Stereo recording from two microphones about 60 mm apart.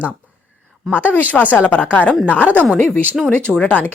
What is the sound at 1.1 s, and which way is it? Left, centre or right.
Speech, left.